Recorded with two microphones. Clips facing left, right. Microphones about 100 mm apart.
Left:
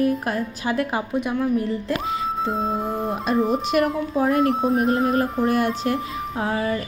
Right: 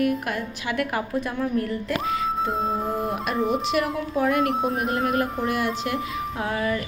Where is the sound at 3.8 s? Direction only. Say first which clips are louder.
Left 7 dB; 50° left (ahead or behind).